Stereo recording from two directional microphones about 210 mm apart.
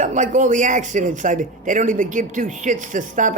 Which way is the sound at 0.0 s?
35° right (ahead or behind).